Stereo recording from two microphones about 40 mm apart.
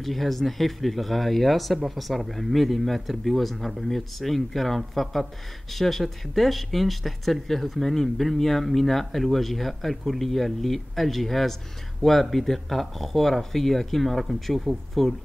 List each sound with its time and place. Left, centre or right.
0.0 s speech: centre